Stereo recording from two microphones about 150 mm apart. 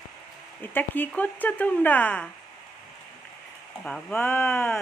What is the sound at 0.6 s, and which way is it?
Speech, 15° left (ahead or behind).